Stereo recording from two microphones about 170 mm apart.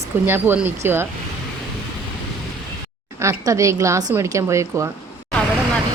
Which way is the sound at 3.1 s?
20° right (ahead or behind).